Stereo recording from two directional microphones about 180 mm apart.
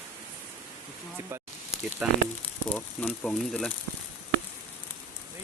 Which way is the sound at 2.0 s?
5° right (ahead or behind).